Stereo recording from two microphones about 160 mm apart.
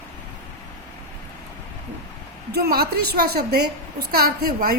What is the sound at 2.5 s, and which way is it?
A woman's voice, 75° right (ahead or behind).